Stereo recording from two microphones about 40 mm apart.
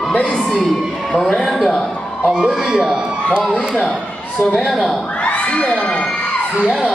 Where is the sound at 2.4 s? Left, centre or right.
Centre.